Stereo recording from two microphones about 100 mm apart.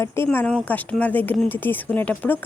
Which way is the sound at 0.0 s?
20° left (ahead or behind).